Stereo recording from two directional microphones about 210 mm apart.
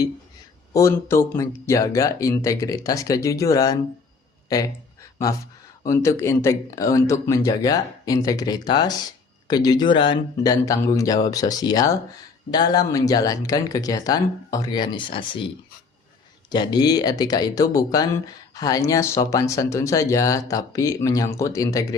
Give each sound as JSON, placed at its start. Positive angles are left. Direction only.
{"t": 0.7, "sound": "speech", "side_deg": 15}
{"t": 5.8, "sound": "speech", "side_deg": 15}
{"t": 16.5, "sound": "speech", "side_deg": 20}